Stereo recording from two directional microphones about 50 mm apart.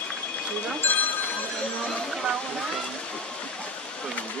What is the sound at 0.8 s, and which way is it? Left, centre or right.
Speech, left.